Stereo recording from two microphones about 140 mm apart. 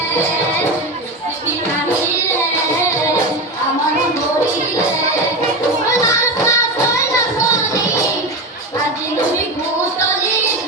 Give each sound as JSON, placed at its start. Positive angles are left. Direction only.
{"t": 5.9, "sound": "music", "side_deg": 20}